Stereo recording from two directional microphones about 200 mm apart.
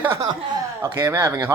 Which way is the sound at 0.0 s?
15° right (ahead or behind).